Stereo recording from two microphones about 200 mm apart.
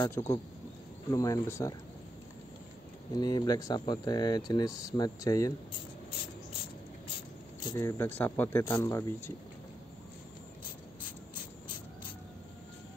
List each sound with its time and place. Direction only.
0.0 s speech: 15° left (ahead or behind)
3.2 s speech: 20° left (ahead or behind)
7.6 s speech: 15° left (ahead or behind)